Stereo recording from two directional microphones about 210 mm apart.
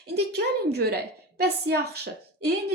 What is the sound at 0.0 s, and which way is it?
A woman's voice, 50° right (ahead or behind).